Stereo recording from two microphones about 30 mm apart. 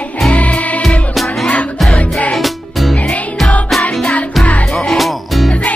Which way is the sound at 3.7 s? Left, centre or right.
Centre.